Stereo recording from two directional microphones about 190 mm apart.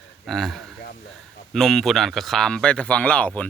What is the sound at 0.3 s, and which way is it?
Speech, centre (ahead or behind).